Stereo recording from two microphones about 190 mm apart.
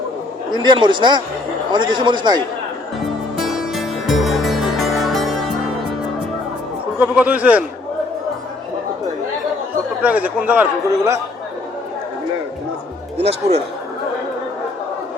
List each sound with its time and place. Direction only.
0.5 s speech: 25° right (ahead or behind)
3.4 s music: centre (ahead or behind)
7.0 s a man's voice: 10° right (ahead or behind)
10.0 s a man's voice: 10° right (ahead or behind)
13.1 s speech: 35° right (ahead or behind)